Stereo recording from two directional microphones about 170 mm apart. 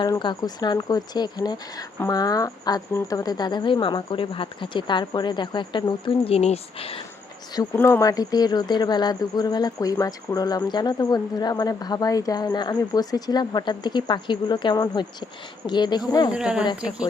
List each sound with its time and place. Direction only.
0.0 s speech: 25° left (ahead or behind)
7.5 s speech: 25° left (ahead or behind)
16.3 s speech: 5° right (ahead or behind)